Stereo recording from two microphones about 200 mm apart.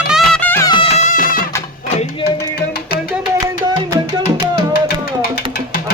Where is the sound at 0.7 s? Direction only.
30° left (ahead or behind).